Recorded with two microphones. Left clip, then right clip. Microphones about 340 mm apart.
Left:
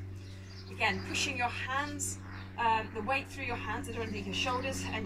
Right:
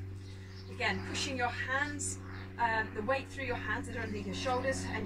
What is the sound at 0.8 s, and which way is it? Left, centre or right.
Speech, centre.